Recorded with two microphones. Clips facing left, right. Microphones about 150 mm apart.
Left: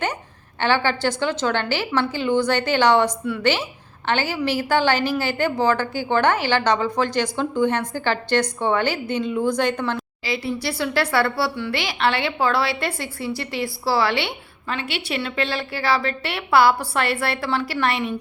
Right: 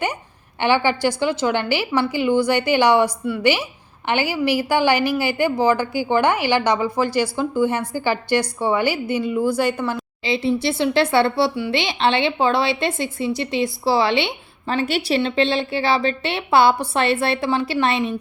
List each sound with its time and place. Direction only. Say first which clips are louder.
0.6 s a woman's voice: right 2 dB; 15° right (ahead or behind)
10.2 s speech: right 6 dB; 25° right (ahead or behind)
14.7 s a woman's voice: right 7 dB; 40° right (ahead or behind)
15.2 s speech: right 6 dB; 25° right (ahead or behind)